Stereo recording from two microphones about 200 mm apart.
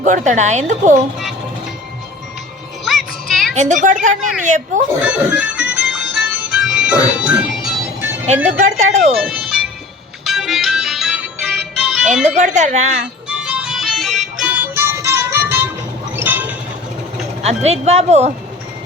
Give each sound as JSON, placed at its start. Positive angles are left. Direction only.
{"t": 0.0, "sound": "a woman's voice", "side_deg": -40}
{"t": 2.8, "sound": "music", "side_deg": 0}
{"t": 3.5, "sound": "a woman's voice", "side_deg": -35}
{"t": 5.0, "sound": "speech", "side_deg": -5}
{"t": 5.9, "sound": "music", "side_deg": 0}
{"t": 8.4, "sound": "a woman's voice", "side_deg": -35}
{"t": 9.1, "sound": "music", "side_deg": 0}
{"t": 12.4, "sound": "a woman's voice", "side_deg": -35}
{"t": 13.2, "sound": "music", "side_deg": -5}
{"t": 16.1, "sound": "a sound", "side_deg": -10}
{"t": 17.4, "sound": "a woman's voice", "side_deg": -30}